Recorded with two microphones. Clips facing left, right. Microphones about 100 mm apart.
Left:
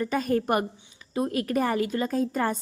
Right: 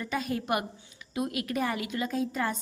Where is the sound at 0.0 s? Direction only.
45° left (ahead or behind).